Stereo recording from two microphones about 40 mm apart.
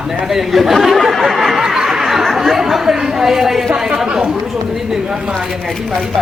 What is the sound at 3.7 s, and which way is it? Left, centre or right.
Speech, right.